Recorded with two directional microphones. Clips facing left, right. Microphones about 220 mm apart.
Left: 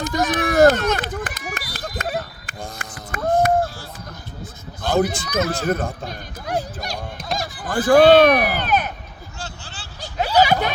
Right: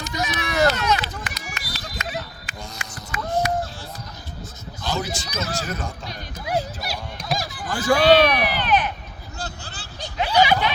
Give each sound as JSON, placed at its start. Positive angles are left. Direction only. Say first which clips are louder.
{"t": 0.0, "sound": "run", "louder": "left 7 dB", "side_deg": 50}
{"t": 4.8, "sound": "a man's voice", "louder": "left 8 dB", "side_deg": 55}
{"t": 7.2, "sound": "honk", "louder": "right 1 dB", "side_deg": 0}
{"t": 7.5, "sound": "speech", "louder": "left 7 dB", "side_deg": 50}
{"t": 9.4, "sound": "vehicle", "louder": "right 2 dB", "side_deg": -40}
{"t": 10.2, "sound": "a sound", "louder": "left 2 dB", "side_deg": 40}